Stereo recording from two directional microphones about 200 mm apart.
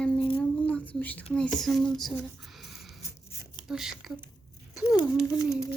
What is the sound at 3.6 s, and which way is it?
Speech, centre (ahead or behind).